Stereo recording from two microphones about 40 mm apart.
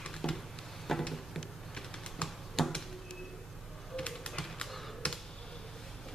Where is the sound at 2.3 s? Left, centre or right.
Centre.